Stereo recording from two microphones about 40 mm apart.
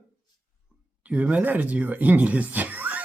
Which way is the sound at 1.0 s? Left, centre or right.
Right.